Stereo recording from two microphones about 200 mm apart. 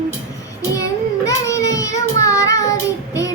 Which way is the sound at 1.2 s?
15° left (ahead or behind).